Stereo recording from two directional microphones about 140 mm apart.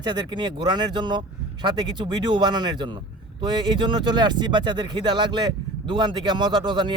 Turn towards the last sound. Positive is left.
turn(degrees=-35)  # may be behind; listen again after turning